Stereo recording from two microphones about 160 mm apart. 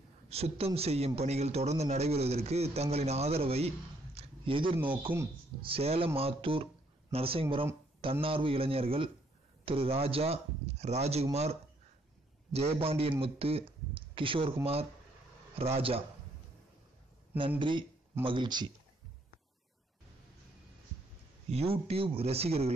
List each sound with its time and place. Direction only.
0.3 s a man's voice: 40° right (ahead or behind)
4.7 s speech: 10° right (ahead or behind)
5.6 s a man's voice: 35° right (ahead or behind)
12.5 s a man's voice: 40° right (ahead or behind)
17.6 s a man's voice: 30° right (ahead or behind)
21.5 s a man's voice: 40° right (ahead or behind)